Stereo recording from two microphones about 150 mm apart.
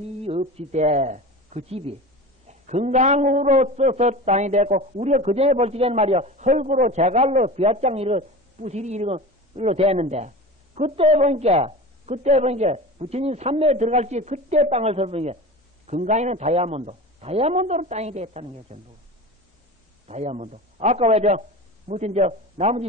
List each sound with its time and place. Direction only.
0.4 s a man's voice: 50° right (ahead or behind)
15.9 s a man's voice: 55° right (ahead or behind)
20.1 s a man's voice: 45° right (ahead or behind)